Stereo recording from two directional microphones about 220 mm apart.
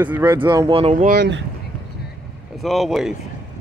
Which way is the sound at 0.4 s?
20° right (ahead or behind).